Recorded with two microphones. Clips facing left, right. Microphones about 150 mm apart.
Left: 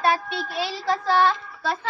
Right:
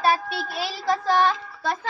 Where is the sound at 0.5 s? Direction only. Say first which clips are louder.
Even; 10° right (ahead or behind).